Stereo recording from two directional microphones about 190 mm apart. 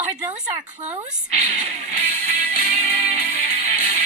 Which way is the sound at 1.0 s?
40° right (ahead or behind).